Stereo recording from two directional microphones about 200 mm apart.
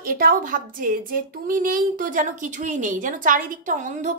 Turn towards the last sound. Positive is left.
turn(degrees=-40)  # may be behind; listen again after turning